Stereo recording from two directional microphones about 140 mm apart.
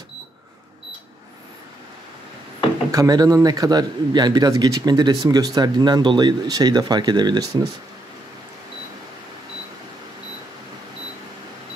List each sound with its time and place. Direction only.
2.9 s a man's voice: 25° right (ahead or behind)